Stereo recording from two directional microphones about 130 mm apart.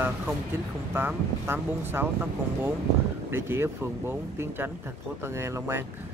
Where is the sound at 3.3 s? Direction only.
20° right (ahead or behind).